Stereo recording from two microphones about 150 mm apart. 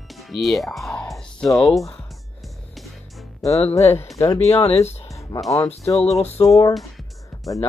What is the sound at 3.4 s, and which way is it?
Speech, 20° left (ahead or behind).